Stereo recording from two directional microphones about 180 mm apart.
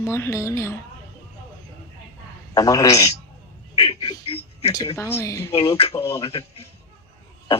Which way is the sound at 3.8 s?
30° left (ahead or behind).